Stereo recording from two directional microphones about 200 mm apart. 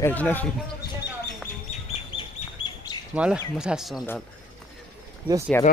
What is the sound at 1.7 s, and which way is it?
Duck, 35° left (ahead or behind).